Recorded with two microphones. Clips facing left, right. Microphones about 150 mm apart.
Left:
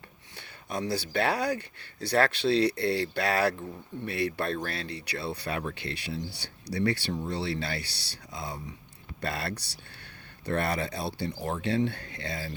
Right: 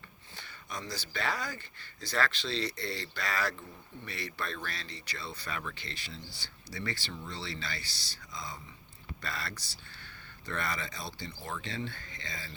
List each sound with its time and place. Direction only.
0.3 s speech: 60° left (ahead or behind)